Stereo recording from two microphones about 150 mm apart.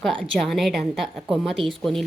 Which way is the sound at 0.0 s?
5° left (ahead or behind).